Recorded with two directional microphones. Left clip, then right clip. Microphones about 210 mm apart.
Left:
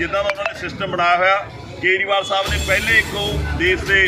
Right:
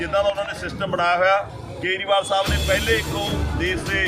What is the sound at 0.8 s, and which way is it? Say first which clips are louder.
A man's voice: left 3 dB; 15° right (ahead or behind).